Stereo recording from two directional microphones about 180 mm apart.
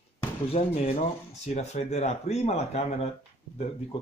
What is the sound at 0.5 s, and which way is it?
Speech, 35° left (ahead or behind).